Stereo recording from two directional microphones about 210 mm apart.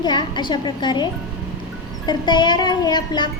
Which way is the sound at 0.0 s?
20° left (ahead or behind).